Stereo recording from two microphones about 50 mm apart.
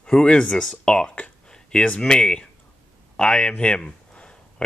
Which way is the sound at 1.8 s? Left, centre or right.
Left.